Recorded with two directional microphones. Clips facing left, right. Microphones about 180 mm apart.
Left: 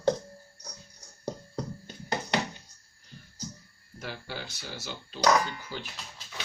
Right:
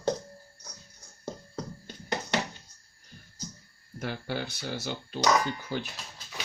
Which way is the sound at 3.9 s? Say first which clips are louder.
Right 5 dB; 55° right (ahead or behind).